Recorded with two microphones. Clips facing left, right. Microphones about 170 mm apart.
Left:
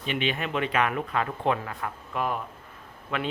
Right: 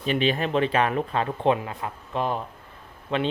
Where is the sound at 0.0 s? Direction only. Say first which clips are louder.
Right 5 dB; 35° right (ahead or behind).